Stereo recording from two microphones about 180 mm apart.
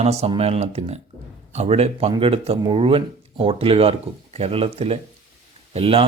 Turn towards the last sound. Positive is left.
turn(degrees=-30)  # may be behind; listen again after turning